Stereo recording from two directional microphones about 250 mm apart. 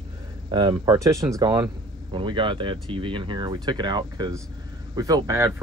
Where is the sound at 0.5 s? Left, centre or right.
Centre.